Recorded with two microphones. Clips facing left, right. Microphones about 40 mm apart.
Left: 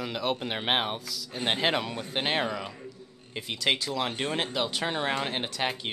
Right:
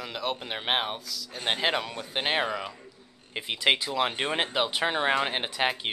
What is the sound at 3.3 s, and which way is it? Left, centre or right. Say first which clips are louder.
A man's voice: right 3 dB; right.